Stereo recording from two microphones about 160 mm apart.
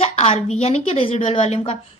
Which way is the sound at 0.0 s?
40° left (ahead or behind).